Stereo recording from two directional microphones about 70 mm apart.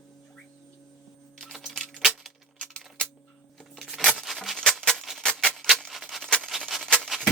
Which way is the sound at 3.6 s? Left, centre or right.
Centre.